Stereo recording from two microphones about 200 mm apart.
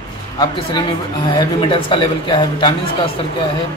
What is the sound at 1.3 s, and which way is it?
Speech, 25° left (ahead or behind).